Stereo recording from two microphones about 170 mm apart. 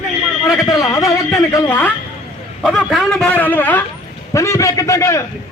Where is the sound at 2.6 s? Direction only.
Centre (ahead or behind).